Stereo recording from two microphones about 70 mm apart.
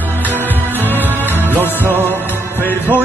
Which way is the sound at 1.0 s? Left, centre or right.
Right.